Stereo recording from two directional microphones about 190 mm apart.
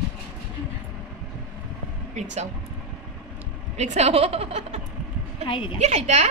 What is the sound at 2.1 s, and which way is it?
Speech, 40° right (ahead or behind).